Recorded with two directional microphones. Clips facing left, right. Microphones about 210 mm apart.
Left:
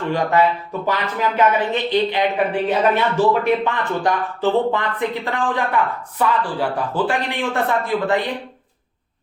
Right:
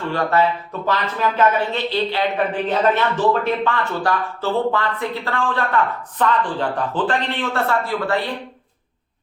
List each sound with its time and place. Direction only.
0.1 s speech: 15° left (ahead or behind)